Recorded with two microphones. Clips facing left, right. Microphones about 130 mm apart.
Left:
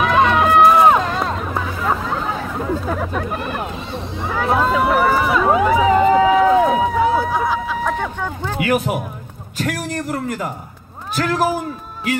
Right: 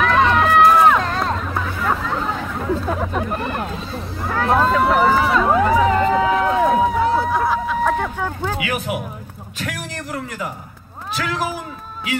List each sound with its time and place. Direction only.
0.0 s run: 15° left (ahead or behind)
0.9 s hubbub: 10° left (ahead or behind)
2.6 s chatter: centre (ahead or behind)
3.3 s run: 5° left (ahead or behind)
8.5 s a sound: 45° left (ahead or behind)
11.1 s a man's voice: 50° left (ahead or behind)